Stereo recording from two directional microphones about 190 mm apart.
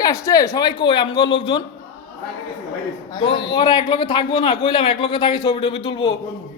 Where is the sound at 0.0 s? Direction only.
15° left (ahead or behind).